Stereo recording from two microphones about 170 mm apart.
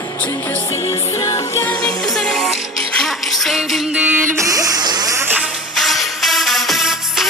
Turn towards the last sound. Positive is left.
turn(degrees=0)  # may be behind; listen again after turning